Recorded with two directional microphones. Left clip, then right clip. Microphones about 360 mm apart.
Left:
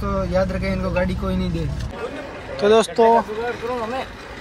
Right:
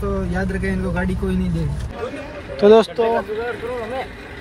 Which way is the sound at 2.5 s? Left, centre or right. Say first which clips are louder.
Right 3 dB; centre.